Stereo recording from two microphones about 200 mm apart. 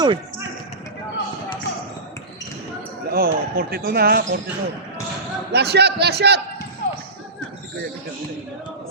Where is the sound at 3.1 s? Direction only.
45° right (ahead or behind).